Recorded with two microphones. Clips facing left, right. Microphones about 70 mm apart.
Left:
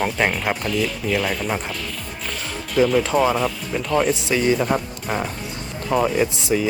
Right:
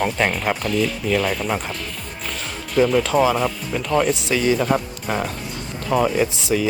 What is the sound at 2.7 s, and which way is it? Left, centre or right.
Speech, centre.